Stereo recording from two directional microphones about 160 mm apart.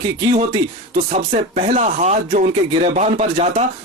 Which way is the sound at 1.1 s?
45° right (ahead or behind).